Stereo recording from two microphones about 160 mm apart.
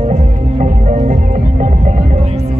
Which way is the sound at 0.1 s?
50° right (ahead or behind).